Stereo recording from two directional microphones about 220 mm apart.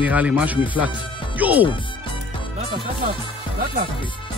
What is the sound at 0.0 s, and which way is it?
Speech, 5° right (ahead or behind).